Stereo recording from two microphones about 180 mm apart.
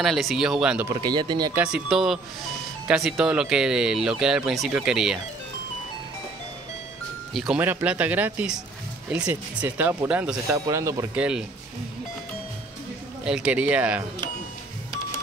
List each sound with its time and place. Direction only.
0.0 s speech: centre (ahead or behind)
0.8 s speech: 25° right (ahead or behind)
1.5 s speech: 5° right (ahead or behind)
7.3 s speech: 5° right (ahead or behind)
11.1 s speech: 5° right (ahead or behind)
13.2 s speech: 5° right (ahead or behind)